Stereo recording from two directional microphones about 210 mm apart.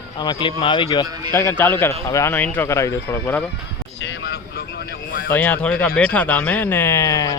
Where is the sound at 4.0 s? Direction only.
55° left (ahead or behind).